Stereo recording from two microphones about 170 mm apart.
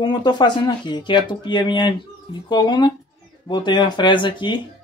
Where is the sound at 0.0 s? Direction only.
25° left (ahead or behind).